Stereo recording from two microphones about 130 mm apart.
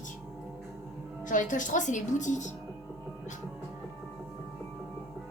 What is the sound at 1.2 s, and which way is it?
A woman's voice, 80° left.